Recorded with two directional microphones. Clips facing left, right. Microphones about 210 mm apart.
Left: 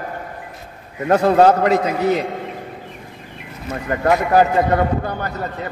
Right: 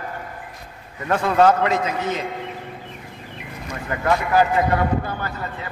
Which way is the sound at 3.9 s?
40° left (ahead or behind).